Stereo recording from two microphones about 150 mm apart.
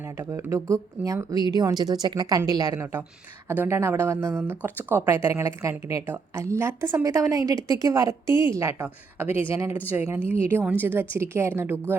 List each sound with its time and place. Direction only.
0.0 s a woman's voice: 20° right (ahead or behind)